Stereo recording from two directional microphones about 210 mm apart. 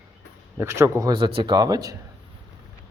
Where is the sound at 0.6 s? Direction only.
15° right (ahead or behind).